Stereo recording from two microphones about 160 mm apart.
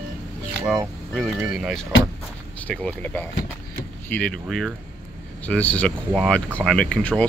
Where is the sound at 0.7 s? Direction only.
Centre (ahead or behind).